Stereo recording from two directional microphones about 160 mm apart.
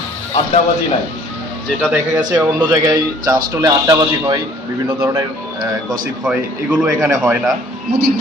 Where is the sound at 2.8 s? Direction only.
25° right (ahead or behind).